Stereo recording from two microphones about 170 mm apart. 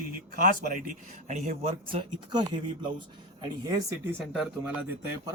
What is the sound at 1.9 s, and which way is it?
Speech, 25° right (ahead or behind).